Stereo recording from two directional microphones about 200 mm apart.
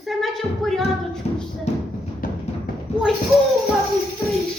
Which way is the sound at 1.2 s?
35° left (ahead or behind).